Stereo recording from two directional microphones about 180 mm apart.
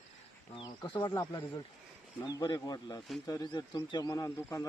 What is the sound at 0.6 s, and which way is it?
Speech, 25° left (ahead or behind).